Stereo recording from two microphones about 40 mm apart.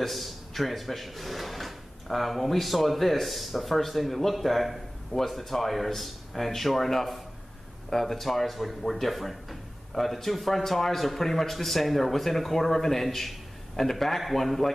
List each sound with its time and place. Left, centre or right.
0.0 s speech: centre